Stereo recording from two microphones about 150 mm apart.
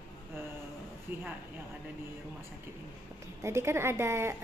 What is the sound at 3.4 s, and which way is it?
Speech, 15° right (ahead or behind).